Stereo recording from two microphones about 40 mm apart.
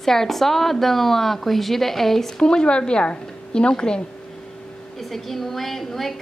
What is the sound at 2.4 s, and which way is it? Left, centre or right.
A woman's voice, left.